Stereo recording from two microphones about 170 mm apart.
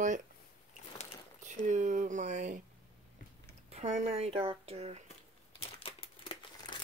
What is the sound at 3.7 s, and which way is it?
Speech, 40° right (ahead or behind).